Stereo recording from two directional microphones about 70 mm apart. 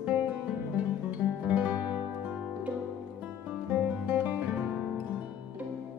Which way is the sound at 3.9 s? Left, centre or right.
Right.